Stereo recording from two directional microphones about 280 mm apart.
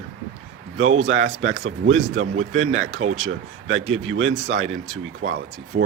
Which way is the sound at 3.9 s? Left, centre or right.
Right.